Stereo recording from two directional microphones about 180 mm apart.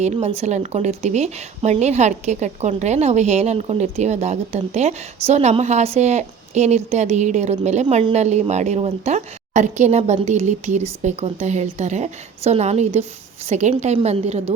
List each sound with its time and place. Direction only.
0.0 s a woman's voice: 40° right (ahead or behind)